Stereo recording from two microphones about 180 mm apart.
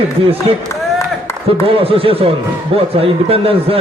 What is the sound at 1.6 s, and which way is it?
A man's voice, 30° right (ahead or behind).